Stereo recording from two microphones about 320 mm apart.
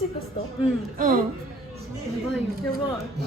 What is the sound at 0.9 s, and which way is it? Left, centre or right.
Speech, right.